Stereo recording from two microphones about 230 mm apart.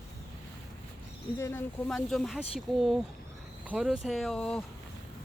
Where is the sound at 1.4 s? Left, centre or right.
Centre.